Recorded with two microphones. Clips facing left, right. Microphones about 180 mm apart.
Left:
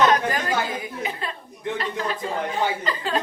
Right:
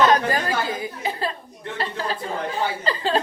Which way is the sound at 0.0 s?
35° right (ahead or behind).